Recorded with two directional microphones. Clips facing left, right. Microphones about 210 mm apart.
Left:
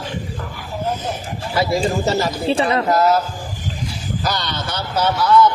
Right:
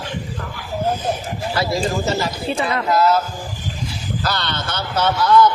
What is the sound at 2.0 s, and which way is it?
Speech, 35° left (ahead or behind).